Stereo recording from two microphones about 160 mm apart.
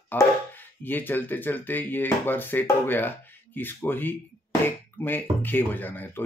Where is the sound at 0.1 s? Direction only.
10° left (ahead or behind).